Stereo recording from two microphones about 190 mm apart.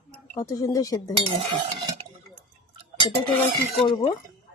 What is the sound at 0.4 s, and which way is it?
Speech, 15° left (ahead or behind).